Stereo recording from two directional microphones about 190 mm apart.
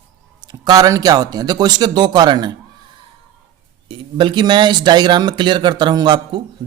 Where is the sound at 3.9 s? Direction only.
25° right (ahead or behind).